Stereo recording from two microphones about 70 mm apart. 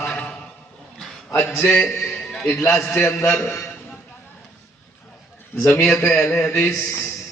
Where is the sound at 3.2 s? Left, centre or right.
Left.